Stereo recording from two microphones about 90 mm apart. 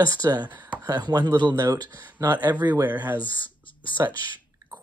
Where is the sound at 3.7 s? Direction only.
65° left (ahead or behind).